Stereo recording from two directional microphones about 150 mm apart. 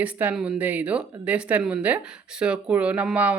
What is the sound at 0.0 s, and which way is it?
Speech, 10° right (ahead or behind).